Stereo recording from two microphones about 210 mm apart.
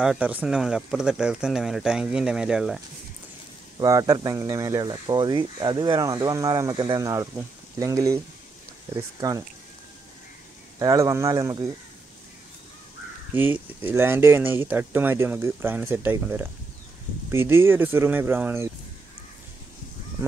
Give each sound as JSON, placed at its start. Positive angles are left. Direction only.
{"t": 0.0, "sound": "speech", "side_deg": -5}
{"t": 3.8, "sound": "speech", "side_deg": -15}
{"t": 10.8, "sound": "speech", "side_deg": -15}
{"t": 13.3, "sound": "speech", "side_deg": -10}